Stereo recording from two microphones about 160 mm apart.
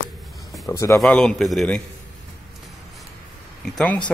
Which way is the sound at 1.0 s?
5° left (ahead or behind).